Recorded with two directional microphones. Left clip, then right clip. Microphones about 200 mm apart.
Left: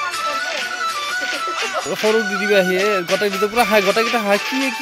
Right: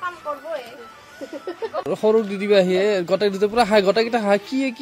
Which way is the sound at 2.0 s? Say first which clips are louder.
Left 1 dB; 5° right (ahead or behind).